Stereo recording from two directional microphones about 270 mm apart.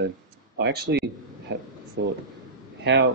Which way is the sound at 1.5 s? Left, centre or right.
Right.